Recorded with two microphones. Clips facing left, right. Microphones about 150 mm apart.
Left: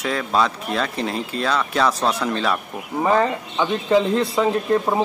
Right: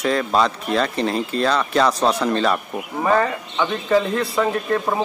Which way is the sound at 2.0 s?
15° right (ahead or behind).